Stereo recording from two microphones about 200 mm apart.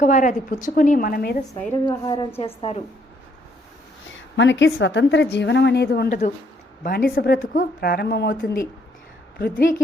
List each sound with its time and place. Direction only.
0.0 s a woman's voice: 40° left (ahead or behind)
1.9 s a woman's voice: 20° left (ahead or behind)
4.4 s a woman's voice: 65° left (ahead or behind)
6.1 s a woman's voice: 40° left (ahead or behind)